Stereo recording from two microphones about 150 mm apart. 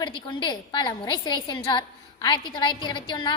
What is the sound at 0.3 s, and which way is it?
A woman's voice, 30° left (ahead or behind).